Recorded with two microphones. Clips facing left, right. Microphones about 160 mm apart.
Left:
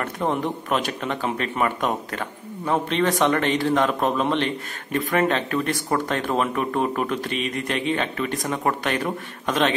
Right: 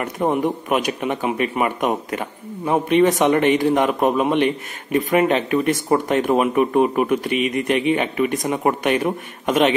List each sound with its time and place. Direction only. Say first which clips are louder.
0.0 s speech: right 4 dB; 15° right (ahead or behind)